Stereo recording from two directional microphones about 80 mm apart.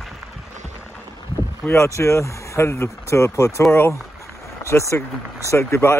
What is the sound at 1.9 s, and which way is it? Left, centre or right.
Speech, left.